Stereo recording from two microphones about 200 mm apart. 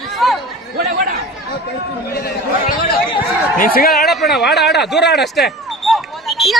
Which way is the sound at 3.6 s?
45° left (ahead or behind).